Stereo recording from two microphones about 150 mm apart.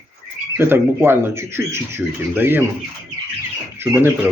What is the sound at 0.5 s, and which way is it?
Speech, 15° right (ahead or behind).